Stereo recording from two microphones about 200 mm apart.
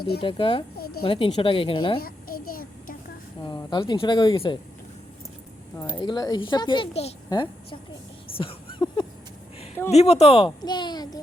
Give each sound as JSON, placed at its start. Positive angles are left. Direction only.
{"t": 0.2, "sound": "speech", "side_deg": 25}
{"t": 0.8, "sound": "a woman's voice", "side_deg": 50}
{"t": 1.0, "sound": "speech", "side_deg": 25}
{"t": 2.0, "sound": "a sound", "side_deg": 45}
{"t": 3.4, "sound": "speech", "side_deg": 25}
{"t": 5.7, "sound": "a woman's voice", "side_deg": 20}
{"t": 8.4, "sound": "a sound", "side_deg": 25}
{"t": 9.9, "sound": "speech", "side_deg": 30}